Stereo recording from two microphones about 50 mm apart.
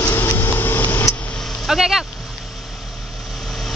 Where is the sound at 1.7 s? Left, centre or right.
Centre.